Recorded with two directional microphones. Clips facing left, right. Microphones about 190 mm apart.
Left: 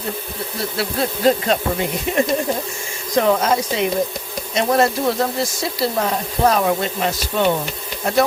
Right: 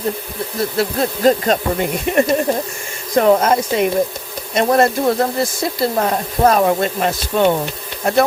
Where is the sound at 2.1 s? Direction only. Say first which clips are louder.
Right 4 dB; 55° right (ahead or behind).